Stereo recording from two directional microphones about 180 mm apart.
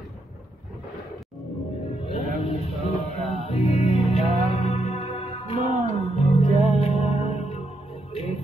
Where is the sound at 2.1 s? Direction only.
30° left (ahead or behind).